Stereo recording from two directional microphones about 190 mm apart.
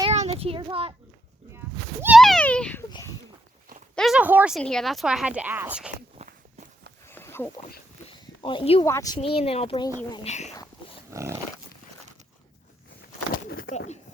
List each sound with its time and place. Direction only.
0.1 s a sound: 35° right (ahead or behind)
1.5 s a sound: 10° right (ahead or behind)
2.1 s a sound: centre (ahead or behind)
3.9 s speech: centre (ahead or behind)
6.1 s walk: 40° right (ahead or behind)
7.1 s a sound: 10° left (ahead or behind)
8.4 s speech: 25° left (ahead or behind)
8.8 s speech: 15° left (ahead or behind)
9.2 s speech: 30° left (ahead or behind)
10.2 s speech: 35° left (ahead or behind)
11.1 s dog: 15° right (ahead or behind)
13.5 s speech: 45° left (ahead or behind)